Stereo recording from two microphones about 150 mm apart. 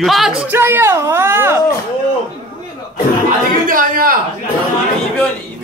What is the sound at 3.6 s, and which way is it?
Speech, 65° right (ahead or behind).